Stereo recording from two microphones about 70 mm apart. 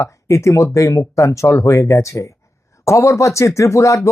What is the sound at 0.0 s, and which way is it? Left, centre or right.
Speech, left.